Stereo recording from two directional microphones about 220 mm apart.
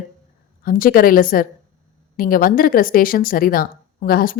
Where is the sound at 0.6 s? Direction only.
40° left (ahead or behind).